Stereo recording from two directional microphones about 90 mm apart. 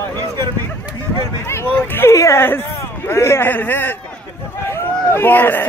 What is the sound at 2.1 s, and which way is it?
Speech, 30° left (ahead or behind).